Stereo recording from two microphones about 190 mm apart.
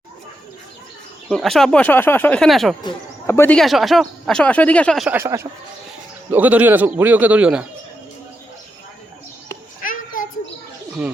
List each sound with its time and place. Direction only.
1.3 s speech: centre (ahead or behind)
2.8 s speech: 15° left (ahead or behind)
5.1 s a man's voice: 15° right (ahead or behind)
9.8 s children playing: 45° left (ahead or behind)
11.0 s speech: 5° right (ahead or behind)